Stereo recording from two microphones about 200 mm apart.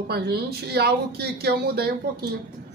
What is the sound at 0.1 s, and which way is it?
Speech, 50° right (ahead or behind).